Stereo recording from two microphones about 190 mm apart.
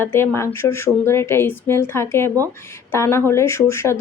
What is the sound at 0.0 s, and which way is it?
Speech, 10° left (ahead or behind).